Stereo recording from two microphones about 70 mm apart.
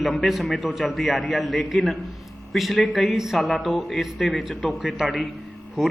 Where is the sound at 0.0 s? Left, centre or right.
Centre.